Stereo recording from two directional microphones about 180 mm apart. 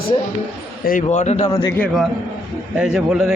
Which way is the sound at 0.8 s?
50° left (ahead or behind).